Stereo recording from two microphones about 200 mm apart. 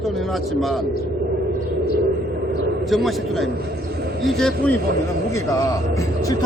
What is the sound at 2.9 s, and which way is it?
A man's voice, centre (ahead or behind).